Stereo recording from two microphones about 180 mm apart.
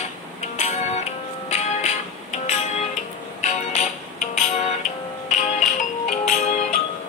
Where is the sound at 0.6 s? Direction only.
40° left (ahead or behind).